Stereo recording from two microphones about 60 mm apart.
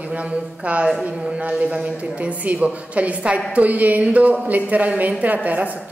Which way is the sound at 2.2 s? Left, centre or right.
Right.